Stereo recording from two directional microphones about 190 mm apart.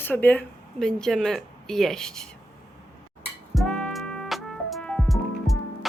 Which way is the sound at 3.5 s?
5° left (ahead or behind).